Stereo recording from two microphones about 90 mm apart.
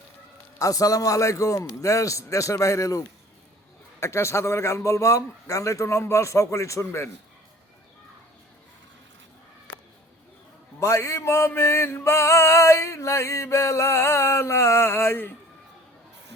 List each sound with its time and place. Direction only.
0.6 s music: 40° left (ahead or behind)
4.0 s music: 30° left (ahead or behind)
10.8 s music: 35° left (ahead or behind)